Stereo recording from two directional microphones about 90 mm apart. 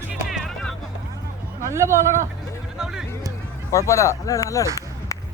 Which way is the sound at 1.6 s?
30° right (ahead or behind).